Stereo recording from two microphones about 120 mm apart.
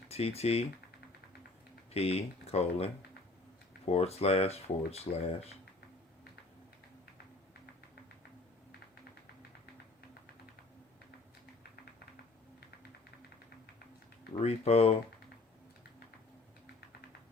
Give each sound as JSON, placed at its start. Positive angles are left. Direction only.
{"t": 0.1, "sound": "speech", "side_deg": 60}
{"t": 1.9, "sound": "speech", "side_deg": 60}
{"t": 14.3, "sound": "speech", "side_deg": 60}